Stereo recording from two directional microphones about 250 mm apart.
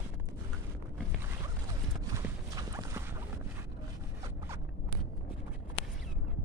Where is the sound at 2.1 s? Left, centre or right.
Centre.